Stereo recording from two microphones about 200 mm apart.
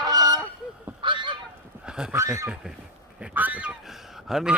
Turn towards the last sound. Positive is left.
turn(degrees=0)  # may be behind; listen again after turning